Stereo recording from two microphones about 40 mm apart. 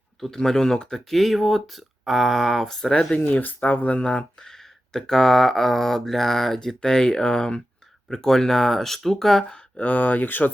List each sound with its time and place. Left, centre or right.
0.3 s speech: centre
1.1 s speech: centre
2.6 s speech: centre
3.6 s speech: left
4.9 s speech: centre
9.7 s speech: left